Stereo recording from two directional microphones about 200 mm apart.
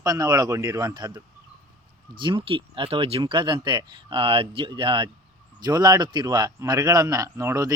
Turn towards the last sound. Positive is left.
turn(degrees=-15)  # may be behind; listen again after turning